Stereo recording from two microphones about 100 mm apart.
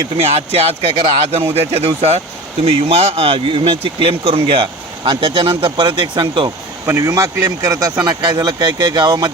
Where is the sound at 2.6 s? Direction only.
85° right; by 6.5 s 55° right (ahead or behind).